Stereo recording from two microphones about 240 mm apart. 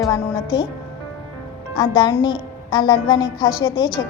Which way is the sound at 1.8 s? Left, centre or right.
Centre.